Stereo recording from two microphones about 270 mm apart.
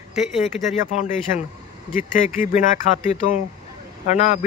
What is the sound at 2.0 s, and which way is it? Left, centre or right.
Speech, left.